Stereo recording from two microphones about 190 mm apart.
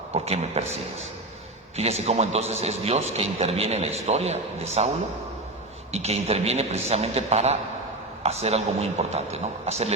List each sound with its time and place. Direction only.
0.1 s a man's voice: 35° right (ahead or behind)